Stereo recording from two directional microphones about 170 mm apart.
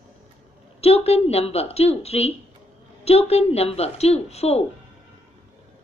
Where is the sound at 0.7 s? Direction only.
35° left (ahead or behind).